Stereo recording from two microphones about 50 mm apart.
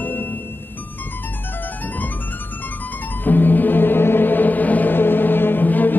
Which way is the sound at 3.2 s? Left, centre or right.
Left.